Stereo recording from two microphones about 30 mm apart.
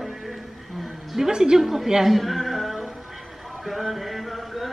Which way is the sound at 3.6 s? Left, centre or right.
Centre.